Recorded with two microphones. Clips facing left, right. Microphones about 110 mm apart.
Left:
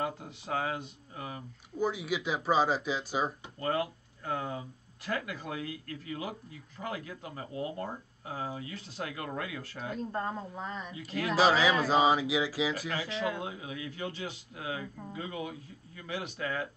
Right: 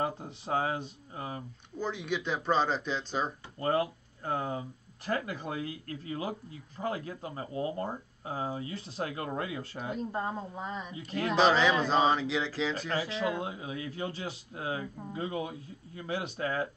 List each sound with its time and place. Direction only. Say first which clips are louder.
0.0 s speech: right 2 dB; 30° right (ahead or behind)
1.8 s speech: left 2 dB; 5° left (ahead or behind)
3.5 s speech: right 4 dB; 30° right (ahead or behind)
9.9 s speech: even; 15° right (ahead or behind)
10.9 s speech: right 1 dB; 30° right (ahead or behind)
11.2 s speech: right 1 dB; 5° left (ahead or behind)
12.9 s speech: right 2 dB; 35° right (ahead or behind)